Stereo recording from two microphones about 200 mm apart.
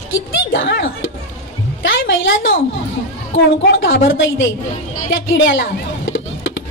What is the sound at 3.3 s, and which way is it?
Speech, 70° left (ahead or behind).